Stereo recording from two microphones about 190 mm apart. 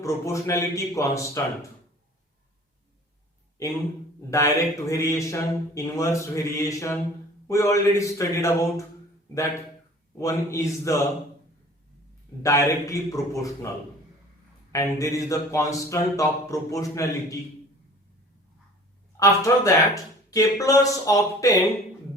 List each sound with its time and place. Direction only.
0.0 s speech: 15° left (ahead or behind)
4.3 s speech: 15° left (ahead or behind)
10.2 s speech: 15° left (ahead or behind)
12.4 s speech: 15° left (ahead or behind)
14.7 s speech: 15° left (ahead or behind)
19.1 s speech: 15° left (ahead or behind)